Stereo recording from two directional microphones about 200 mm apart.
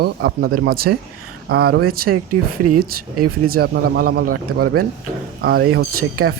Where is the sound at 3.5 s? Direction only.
50° right (ahead or behind).